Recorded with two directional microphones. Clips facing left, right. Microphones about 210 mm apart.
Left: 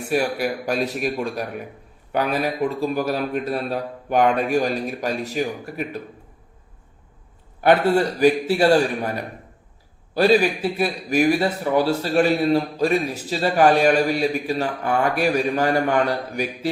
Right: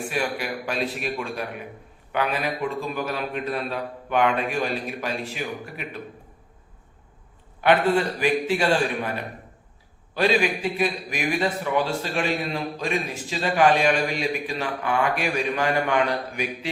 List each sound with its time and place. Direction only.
0.1 s a man's voice: 40° left (ahead or behind)
7.6 s a man's voice: 40° left (ahead or behind)